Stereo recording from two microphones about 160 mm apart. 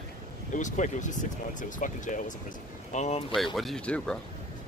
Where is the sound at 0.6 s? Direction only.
50° left (ahead or behind).